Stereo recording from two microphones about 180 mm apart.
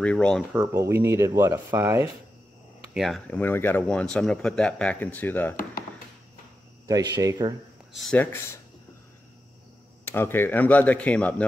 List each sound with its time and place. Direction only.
0.0 s speech: 5° left (ahead or behind)
0.5 s speech: 5° right (ahead or behind)
2.9 s speech: centre (ahead or behind)
7.2 s speech: 20° right (ahead or behind)
7.9 s speech: 5° left (ahead or behind)
10.0 s speech: 10° left (ahead or behind)